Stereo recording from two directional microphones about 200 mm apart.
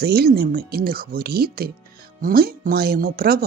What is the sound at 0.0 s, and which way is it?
Speech, 50° right (ahead or behind).